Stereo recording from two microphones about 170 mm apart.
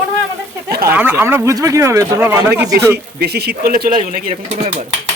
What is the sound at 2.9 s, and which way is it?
A man's voice, 70° right (ahead or behind).